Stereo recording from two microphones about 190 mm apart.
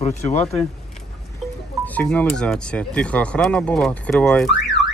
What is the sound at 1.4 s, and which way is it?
Music, centre (ahead or behind).